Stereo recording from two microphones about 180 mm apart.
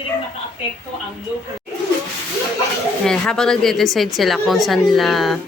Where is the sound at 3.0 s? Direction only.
5° left (ahead or behind).